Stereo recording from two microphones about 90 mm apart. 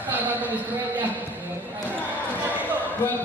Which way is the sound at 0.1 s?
20° right (ahead or behind).